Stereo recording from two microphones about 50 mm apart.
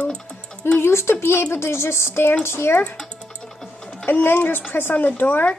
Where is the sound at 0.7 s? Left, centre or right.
Left.